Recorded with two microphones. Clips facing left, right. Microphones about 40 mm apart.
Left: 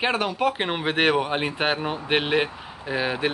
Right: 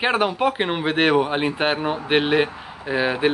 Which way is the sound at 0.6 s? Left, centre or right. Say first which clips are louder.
Right 2 dB; centre.